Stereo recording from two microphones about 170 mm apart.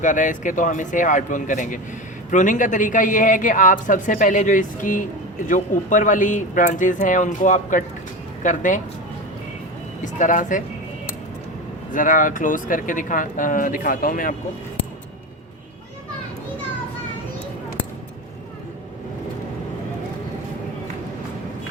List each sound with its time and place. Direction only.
0.0 s speech: 50° left (ahead or behind)
10.0 s speech: 50° left (ahead or behind)
11.9 s speech: 50° left (ahead or behind)